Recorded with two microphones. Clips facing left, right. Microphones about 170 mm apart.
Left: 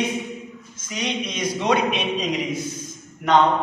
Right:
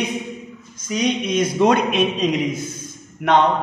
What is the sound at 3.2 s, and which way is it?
Speech, 65° right (ahead or behind).